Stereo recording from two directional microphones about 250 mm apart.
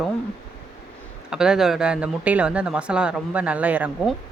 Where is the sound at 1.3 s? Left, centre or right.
Centre.